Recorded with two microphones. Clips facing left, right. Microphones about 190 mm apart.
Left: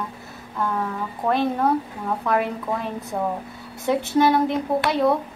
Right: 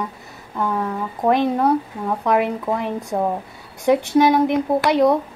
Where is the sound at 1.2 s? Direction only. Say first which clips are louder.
Right 4 dB; 15° right (ahead or behind).